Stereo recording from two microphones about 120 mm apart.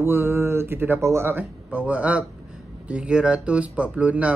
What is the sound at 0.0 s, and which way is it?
Speech, 20° right (ahead or behind).